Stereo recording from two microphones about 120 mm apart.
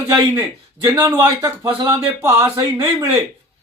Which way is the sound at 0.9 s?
25° right (ahead or behind).